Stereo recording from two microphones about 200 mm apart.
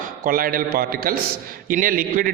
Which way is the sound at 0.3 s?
45° right (ahead or behind).